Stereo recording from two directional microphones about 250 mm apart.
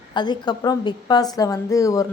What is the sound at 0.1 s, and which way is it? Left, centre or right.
A woman's voice, centre.